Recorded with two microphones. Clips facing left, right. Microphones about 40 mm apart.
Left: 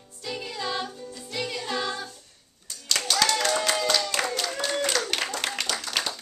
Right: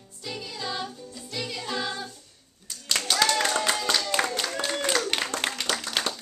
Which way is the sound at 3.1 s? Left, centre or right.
Right.